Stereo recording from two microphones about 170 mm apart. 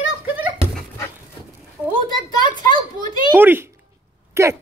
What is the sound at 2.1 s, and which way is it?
A child's voice, 25° left (ahead or behind).